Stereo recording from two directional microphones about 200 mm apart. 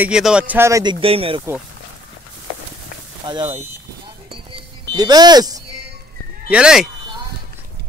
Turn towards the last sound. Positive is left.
turn(degrees=-5)  # may be behind; listen again after turning